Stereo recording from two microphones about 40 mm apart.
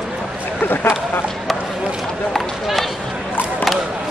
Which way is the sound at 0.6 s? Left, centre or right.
Left.